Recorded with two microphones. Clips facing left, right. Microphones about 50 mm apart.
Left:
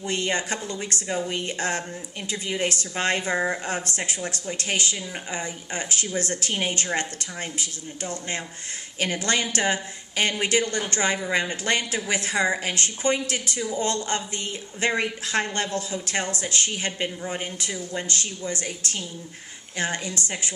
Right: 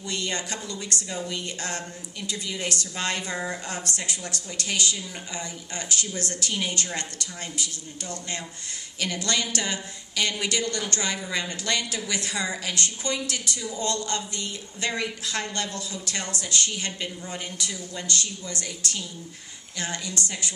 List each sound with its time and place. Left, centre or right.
0.0 s a woman's voice: left